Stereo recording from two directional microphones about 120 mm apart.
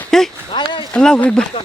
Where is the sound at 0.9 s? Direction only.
5° left (ahead or behind).